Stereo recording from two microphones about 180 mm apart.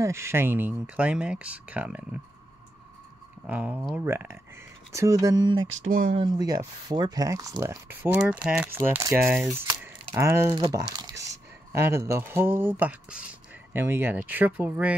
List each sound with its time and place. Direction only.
0.0 s speech: 15° right (ahead or behind)
3.4 s speech: 5° right (ahead or behind); by 5.7 s 25° right (ahead or behind)
5.9 s speech: 50° right (ahead or behind)
6.1 s speech: 25° right (ahead or behind)
10.5 s speech: 25° right (ahead or behind); by 15.0 s 10° right (ahead or behind)